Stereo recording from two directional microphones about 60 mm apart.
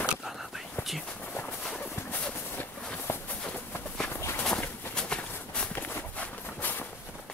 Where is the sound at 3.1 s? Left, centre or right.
Left.